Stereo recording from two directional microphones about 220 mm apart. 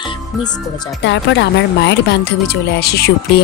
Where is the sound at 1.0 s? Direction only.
55° left (ahead or behind).